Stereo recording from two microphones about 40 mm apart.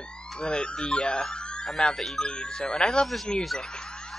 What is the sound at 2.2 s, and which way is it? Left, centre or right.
Speech, left.